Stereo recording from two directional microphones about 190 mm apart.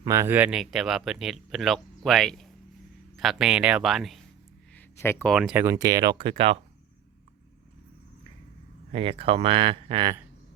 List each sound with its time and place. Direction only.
0.0 s speech: 15° right (ahead or behind); by 4.2 s centre (ahead or behind)
4.7 s a sound: 10° left (ahead or behind)
5.3 s speech: 5° right (ahead or behind); by 6.6 s 30° right (ahead or behind)
8.9 s speech: 30° right (ahead or behind)